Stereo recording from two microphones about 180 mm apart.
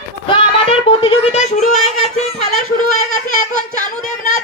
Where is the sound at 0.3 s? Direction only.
30° left (ahead or behind).